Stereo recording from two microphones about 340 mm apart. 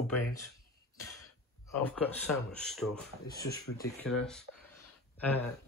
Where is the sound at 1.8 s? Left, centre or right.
Centre.